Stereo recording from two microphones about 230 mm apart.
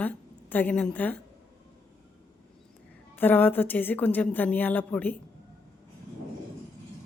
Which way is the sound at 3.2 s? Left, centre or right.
Centre.